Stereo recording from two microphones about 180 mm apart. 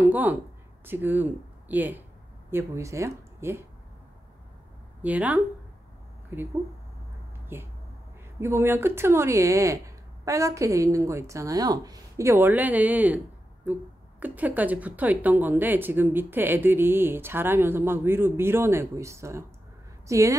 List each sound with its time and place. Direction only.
0.1 s a woman's voice: 10° right (ahead or behind)
5.0 s a woman's voice: 10° right (ahead or behind)
7.5 s a woman's voice: 10° right (ahead or behind)